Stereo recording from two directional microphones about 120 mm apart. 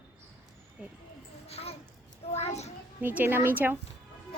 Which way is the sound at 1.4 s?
60° left (ahead or behind).